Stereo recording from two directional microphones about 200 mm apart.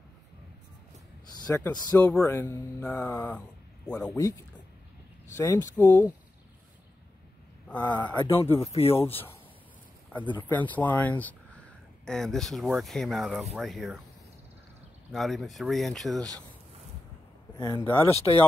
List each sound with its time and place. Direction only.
1.5 s speech: 15° left (ahead or behind)
7.6 s speech: 5° left (ahead or behind)
8.2 s speech: 25° left (ahead or behind)
10.3 s speech: 10° left (ahead or behind)
15.1 s speech: centre (ahead or behind)
17.6 s speech: 15° left (ahead or behind)